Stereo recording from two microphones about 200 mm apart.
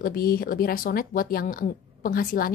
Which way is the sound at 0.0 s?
50° left (ahead or behind).